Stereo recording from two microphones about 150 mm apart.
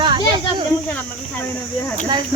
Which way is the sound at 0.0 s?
30° right (ahead or behind).